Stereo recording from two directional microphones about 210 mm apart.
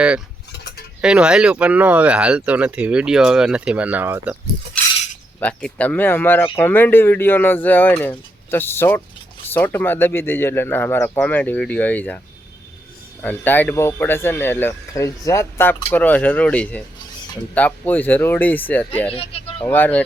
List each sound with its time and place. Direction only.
1.0 s speech: 5° right (ahead or behind)
5.4 s speech: 5° left (ahead or behind)
13.2 s speech: 10° left (ahead or behind)
19.1 s speech: 25° left (ahead or behind)
19.6 s speech: 10° left (ahead or behind)